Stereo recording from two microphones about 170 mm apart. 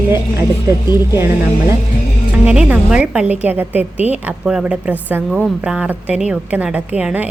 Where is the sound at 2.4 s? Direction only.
5° right (ahead or behind).